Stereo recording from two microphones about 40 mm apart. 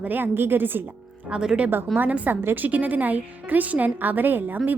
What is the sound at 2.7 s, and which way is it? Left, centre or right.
A woman's voice, right.